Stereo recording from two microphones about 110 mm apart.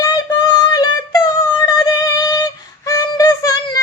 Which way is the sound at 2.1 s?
35° left (ahead or behind).